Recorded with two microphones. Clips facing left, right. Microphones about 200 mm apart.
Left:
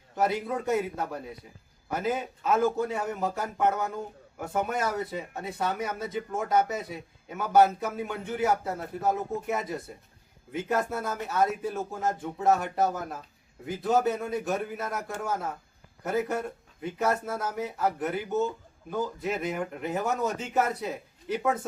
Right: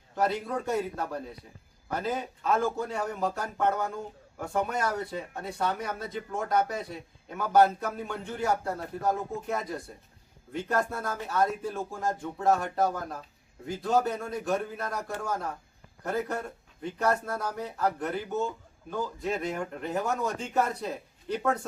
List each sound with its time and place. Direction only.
0.2 s a man's voice: 5° left (ahead or behind)